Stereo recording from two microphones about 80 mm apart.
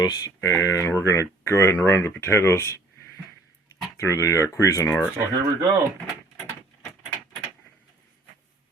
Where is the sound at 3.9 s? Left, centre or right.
Left.